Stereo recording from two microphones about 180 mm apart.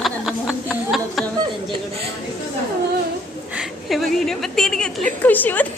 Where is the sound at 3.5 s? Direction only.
Centre (ahead or behind).